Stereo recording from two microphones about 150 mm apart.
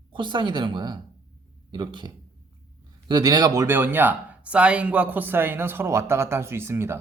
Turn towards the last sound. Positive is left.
turn(degrees=-15)  # may be behind; listen again after turning